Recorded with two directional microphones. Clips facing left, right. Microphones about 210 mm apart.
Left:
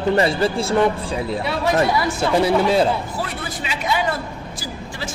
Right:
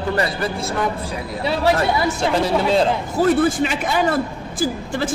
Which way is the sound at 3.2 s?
50° right (ahead or behind).